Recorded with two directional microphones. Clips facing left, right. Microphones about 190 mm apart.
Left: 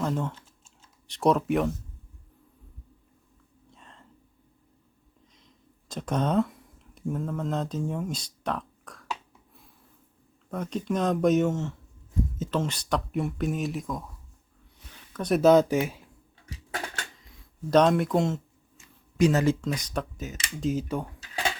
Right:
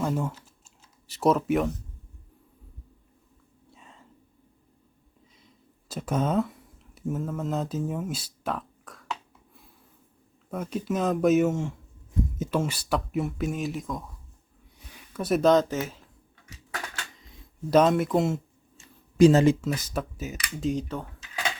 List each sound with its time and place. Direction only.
0.0 s typing: 10° right (ahead or behind)
1.0 s speech: 5° right (ahead or behind)
3.7 s whispering: 5° right (ahead or behind)
5.9 s speech: 5° right (ahead or behind)
10.5 s speech: 5° right (ahead or behind)
14.9 s a sound: 5° right (ahead or behind)
15.4 s speech: 10° left (ahead or behind)
17.7 s speech: 5° right (ahead or behind)
18.8 s a sound: 30° right (ahead or behind)
19.6 s speech: 5° right (ahead or behind); by 21.1 s 10° left (ahead or behind)